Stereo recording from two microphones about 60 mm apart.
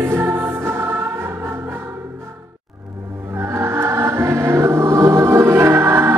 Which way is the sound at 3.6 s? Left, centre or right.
Right.